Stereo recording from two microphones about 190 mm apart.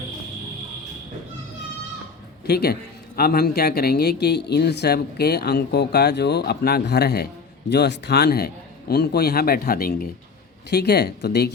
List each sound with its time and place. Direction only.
2.5 s speech: 55° left (ahead or behind)